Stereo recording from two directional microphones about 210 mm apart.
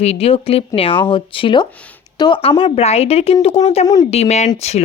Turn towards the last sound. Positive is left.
turn(degrees=30)  # may be behind; listen again after turning